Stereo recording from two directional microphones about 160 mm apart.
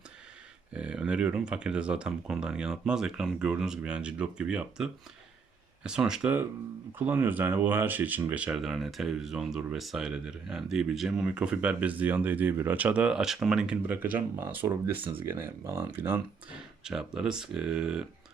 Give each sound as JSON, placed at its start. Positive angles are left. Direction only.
{"t": 0.7, "sound": "speech", "side_deg": -5}
{"t": 14.9, "sound": "speech", "side_deg": -35}
{"t": 15.3, "sound": "speech", "side_deg": -15}